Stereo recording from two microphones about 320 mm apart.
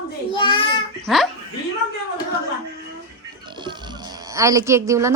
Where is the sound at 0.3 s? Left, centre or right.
Centre.